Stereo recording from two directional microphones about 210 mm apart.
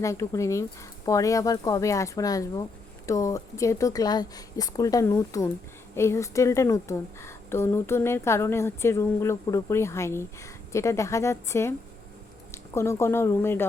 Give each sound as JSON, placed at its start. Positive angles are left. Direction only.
{"t": 0.0, "sound": "a woman's voice", "side_deg": 15}